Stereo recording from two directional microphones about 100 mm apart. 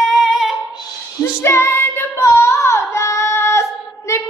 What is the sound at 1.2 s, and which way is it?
Child singing, 25° left (ahead or behind).